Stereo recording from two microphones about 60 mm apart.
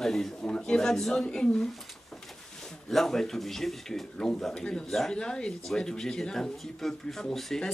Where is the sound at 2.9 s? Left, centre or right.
Centre.